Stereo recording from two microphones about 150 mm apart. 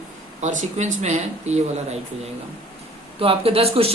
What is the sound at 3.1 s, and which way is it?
Speech, 40° right (ahead or behind).